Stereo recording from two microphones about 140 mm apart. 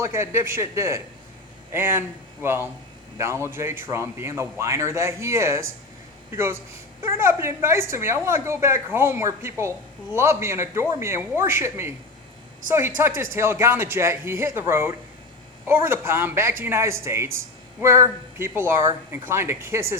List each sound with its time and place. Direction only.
0.0 s a woman's voice: 20° right (ahead or behind)
13.0 s a woman's voice: 15° right (ahead or behind)